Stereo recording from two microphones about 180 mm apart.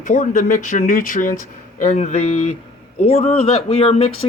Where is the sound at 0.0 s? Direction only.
45° left (ahead or behind).